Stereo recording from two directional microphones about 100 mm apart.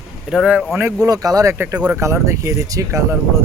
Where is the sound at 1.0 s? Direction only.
35° right (ahead or behind).